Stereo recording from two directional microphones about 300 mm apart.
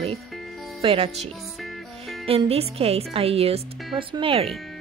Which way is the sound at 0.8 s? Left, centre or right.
Centre.